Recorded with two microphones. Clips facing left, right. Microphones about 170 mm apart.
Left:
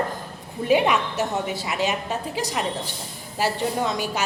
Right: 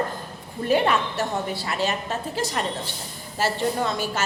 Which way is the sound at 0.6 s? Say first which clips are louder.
Left 1 dB; 10° left (ahead or behind).